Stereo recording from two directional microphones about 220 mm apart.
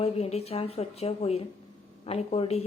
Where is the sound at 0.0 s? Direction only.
30° left (ahead or behind).